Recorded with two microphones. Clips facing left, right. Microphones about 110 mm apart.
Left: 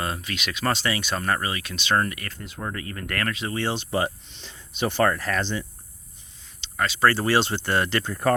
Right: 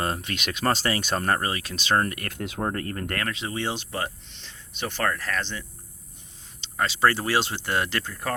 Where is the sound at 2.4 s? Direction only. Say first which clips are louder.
Right 7 dB; 70° right (ahead or behind).